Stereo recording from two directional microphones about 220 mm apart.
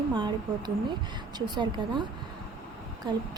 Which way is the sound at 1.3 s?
20° right (ahead or behind).